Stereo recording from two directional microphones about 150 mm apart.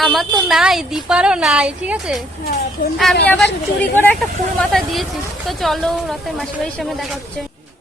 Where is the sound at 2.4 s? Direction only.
90° left.